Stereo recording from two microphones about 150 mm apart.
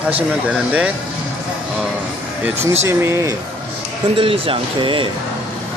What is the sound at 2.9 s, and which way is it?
Speech, 20° right (ahead or behind).